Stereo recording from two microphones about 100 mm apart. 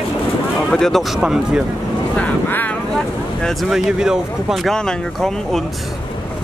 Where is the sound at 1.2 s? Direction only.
10° right (ahead or behind).